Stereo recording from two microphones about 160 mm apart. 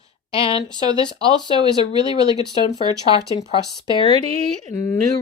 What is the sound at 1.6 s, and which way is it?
Speech, 25° right (ahead or behind).